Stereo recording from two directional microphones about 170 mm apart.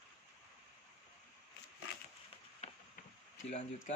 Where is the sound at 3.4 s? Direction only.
40° left (ahead or behind).